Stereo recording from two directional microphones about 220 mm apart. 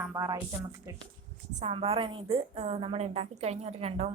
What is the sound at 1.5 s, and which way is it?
A woman's voice, 30° right (ahead or behind).